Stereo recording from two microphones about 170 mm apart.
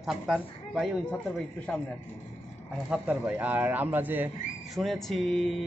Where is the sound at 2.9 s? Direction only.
10° right (ahead or behind).